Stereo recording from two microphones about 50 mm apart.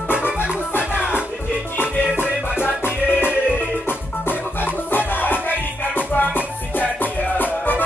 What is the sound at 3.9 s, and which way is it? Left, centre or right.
Music, left.